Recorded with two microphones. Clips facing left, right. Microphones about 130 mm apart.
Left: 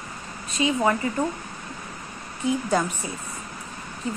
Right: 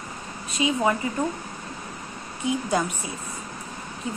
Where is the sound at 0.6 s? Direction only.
15° right (ahead or behind).